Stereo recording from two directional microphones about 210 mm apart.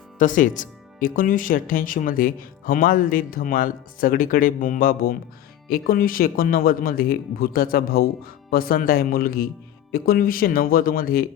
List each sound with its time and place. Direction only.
0.2 s speech: 40° left (ahead or behind)